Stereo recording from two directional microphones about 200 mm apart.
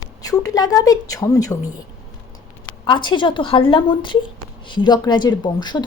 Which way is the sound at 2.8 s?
25° left (ahead or behind).